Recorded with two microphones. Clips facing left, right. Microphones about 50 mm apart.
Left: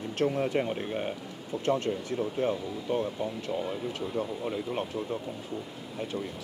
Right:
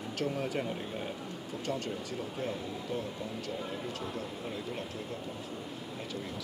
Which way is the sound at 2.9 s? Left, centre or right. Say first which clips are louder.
Left 9 dB; left.